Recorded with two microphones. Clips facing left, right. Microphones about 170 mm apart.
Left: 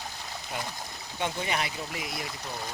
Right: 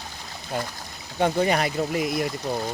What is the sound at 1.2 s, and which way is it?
Speech, 50° right (ahead or behind).